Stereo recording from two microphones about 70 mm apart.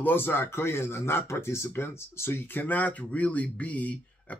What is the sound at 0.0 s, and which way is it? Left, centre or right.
Speech, left.